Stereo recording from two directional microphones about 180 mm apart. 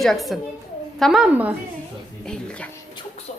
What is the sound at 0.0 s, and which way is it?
A woman's voice, centre (ahead or behind).